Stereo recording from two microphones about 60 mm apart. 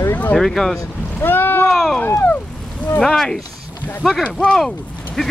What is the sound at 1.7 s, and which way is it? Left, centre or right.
Speech, centre.